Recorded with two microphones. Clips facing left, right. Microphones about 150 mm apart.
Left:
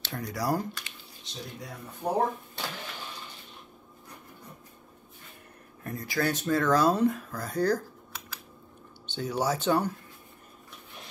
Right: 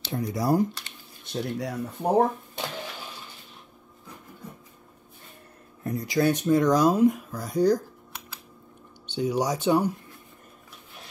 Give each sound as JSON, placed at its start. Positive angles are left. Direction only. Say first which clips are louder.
{"t": 0.0, "sound": "speech", "louder": "right 4 dB", "side_deg": -20}
{"t": 1.2, "sound": "speech", "louder": "right 12 dB", "side_deg": -65}
{"t": 5.9, "sound": "speech", "louder": "right 6 dB", "side_deg": -20}
{"t": 9.0, "sound": "speech", "louder": "right 4 dB", "side_deg": -10}